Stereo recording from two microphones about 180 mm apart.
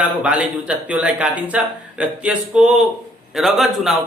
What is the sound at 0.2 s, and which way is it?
A man's voice, 5° right (ahead or behind).